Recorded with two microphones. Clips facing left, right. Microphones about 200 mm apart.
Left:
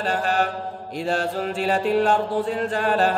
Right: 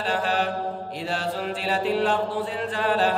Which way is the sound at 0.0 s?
45° left (ahead or behind).